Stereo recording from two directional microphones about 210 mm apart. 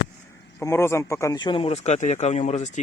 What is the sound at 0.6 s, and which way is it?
Speech, 10° left (ahead or behind).